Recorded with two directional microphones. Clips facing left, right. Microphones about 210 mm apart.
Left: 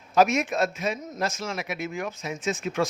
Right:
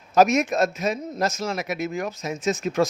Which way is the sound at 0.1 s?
40° right (ahead or behind).